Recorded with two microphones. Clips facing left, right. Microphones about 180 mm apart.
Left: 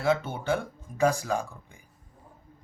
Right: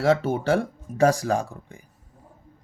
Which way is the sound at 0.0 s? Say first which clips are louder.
Right 5 dB; 90° right.